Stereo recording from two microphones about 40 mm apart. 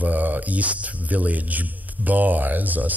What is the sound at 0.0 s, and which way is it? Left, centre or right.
Speech, right.